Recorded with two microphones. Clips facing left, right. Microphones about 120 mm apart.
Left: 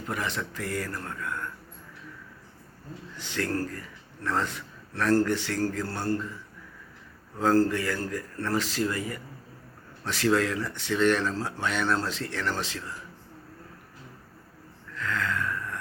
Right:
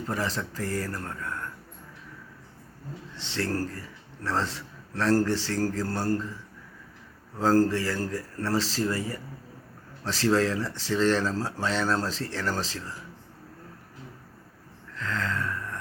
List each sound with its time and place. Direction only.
0.1 s a man's voice: 35° right (ahead or behind)
3.2 s a man's voice: 30° right (ahead or behind)
7.3 s a man's voice: 35° right (ahead or behind)
14.9 s a sound: 30° right (ahead or behind)